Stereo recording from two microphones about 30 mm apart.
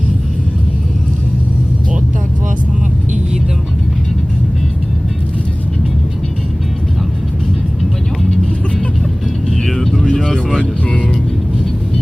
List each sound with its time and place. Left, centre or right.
9.6 s vehicle: centre
10.6 s music: left